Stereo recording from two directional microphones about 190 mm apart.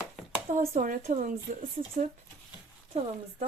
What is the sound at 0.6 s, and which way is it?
Speech, 45° right (ahead or behind).